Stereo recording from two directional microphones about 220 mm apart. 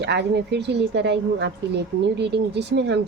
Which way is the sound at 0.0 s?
50° right (ahead or behind).